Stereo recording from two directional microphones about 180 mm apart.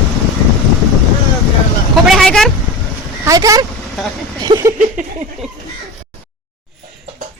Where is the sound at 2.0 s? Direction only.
Centre (ahead or behind).